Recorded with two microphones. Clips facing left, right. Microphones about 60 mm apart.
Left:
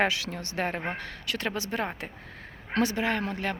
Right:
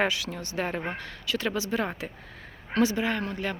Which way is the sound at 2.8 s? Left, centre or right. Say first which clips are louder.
Right 1 dB; left.